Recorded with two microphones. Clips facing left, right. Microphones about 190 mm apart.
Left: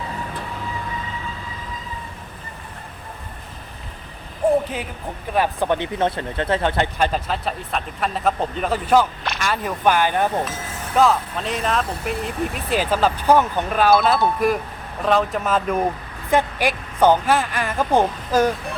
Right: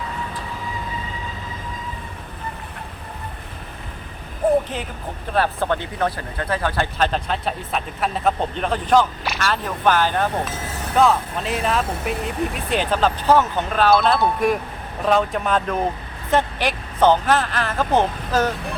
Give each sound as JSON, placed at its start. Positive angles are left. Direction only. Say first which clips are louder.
{"t": 4.4, "sound": "vehicle", "louder": "even", "side_deg": -5}
{"t": 5.3, "sound": "speech", "louder": "left 1 dB", "side_deg": 15}
{"t": 7.0, "sound": "speech", "louder": "even", "side_deg": 5}
{"t": 10.9, "sound": "speech", "louder": "even", "side_deg": 0}